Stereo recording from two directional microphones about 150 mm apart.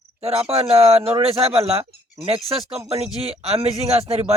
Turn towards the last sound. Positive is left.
turn(degrees=-45)  # may be behind; listen again after turning